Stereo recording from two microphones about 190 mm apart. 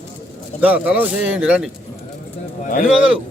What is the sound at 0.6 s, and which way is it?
Speech, 10° right (ahead or behind).